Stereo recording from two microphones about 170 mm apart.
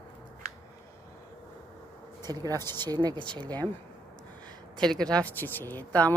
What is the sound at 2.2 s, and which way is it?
Speech, 25° right (ahead or behind).